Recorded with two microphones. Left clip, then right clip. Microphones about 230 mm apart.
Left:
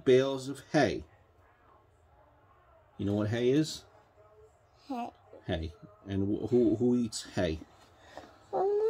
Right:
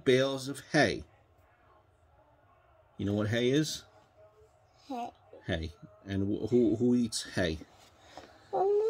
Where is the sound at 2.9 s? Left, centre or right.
Right.